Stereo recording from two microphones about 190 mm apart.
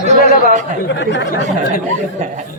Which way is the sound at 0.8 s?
70° left (ahead or behind).